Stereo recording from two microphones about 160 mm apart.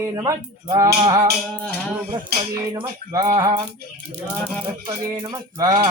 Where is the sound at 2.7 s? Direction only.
25° right (ahead or behind).